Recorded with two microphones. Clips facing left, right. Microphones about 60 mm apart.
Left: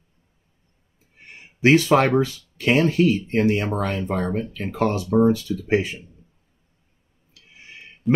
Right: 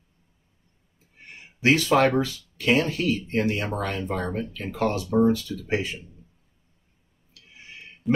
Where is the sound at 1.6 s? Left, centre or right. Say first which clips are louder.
Left 3 dB; left.